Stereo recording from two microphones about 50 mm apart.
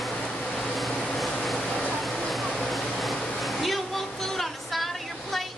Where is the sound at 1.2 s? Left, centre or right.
Centre.